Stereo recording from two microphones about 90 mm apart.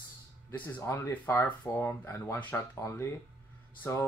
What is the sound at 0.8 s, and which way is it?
Speech, 30° left (ahead or behind).